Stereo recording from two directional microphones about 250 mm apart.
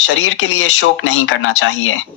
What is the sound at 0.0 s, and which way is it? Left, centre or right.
Speech, left.